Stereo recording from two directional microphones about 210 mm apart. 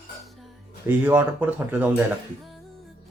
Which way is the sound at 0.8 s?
10° right (ahead or behind).